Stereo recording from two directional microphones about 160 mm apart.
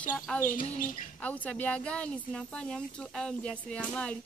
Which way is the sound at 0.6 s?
60° left (ahead or behind).